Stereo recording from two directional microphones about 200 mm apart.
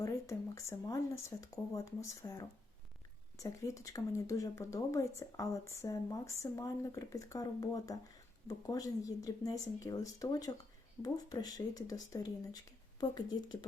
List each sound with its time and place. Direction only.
0.0 s speech: 15° left (ahead or behind)